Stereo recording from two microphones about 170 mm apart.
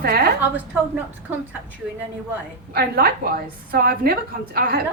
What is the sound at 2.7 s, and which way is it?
A woman's voice, 65° right (ahead or behind).